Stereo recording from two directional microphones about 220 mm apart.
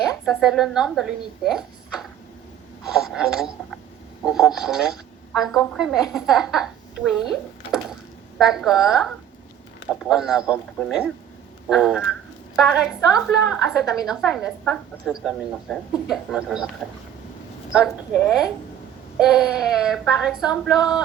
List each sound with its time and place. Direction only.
0.3 s a woman's voice: centre (ahead or behind)
10.1 s a woman's voice: 5° right (ahead or behind)
13.0 s a woman's voice: 15° left (ahead or behind)
13.2 s a woman's voice: centre (ahead or behind)
17.7 s a woman's voice: centre (ahead or behind)